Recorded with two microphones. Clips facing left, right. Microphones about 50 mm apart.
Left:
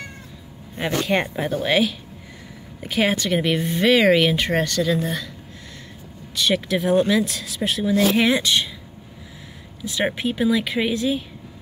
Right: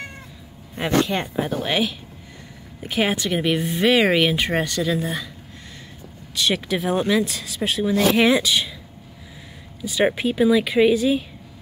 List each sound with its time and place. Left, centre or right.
1.0 s speech: left
1.3 s speech: centre
6.3 s speech: centre
9.8 s speech: centre